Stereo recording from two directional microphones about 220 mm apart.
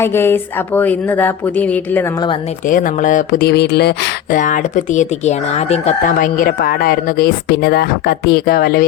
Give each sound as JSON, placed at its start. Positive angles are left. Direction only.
{"t": 0.0, "sound": "speech", "side_deg": 10}
{"t": 2.6, "sound": "speech", "side_deg": 35}